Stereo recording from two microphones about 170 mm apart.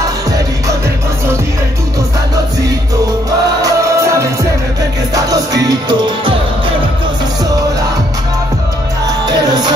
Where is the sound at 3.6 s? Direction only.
15° right (ahead or behind).